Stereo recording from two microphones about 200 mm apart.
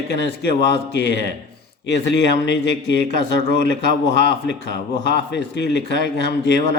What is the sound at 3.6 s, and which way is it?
Speech, 60° left (ahead or behind).